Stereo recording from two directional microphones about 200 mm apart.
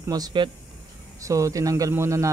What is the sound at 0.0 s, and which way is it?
Speech, 20° right (ahead or behind).